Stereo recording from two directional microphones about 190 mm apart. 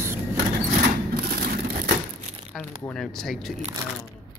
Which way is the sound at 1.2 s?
55° right (ahead or behind).